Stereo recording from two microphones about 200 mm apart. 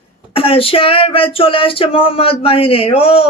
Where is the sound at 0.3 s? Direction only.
30° left (ahead or behind).